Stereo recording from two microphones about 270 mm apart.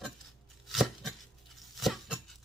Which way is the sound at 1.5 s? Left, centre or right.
Centre.